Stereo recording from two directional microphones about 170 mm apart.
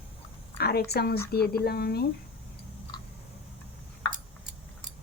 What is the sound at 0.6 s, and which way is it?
A woman's voice, 70° left (ahead or behind).